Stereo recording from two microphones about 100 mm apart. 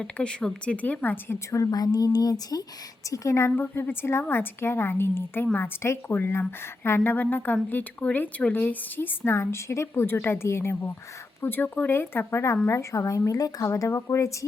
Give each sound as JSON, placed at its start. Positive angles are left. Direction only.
{"t": 0.0, "sound": "speech", "side_deg": 10}
{"t": 3.5, "sound": "a woman's voice", "side_deg": 20}